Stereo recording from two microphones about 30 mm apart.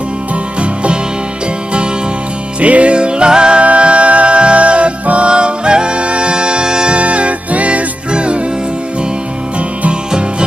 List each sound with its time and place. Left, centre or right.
2.6 s music: right
3.6 s music: right
7.0 s music: right
8.1 s music: right